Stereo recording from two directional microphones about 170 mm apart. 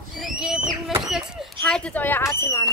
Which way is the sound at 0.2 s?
5° right (ahead or behind).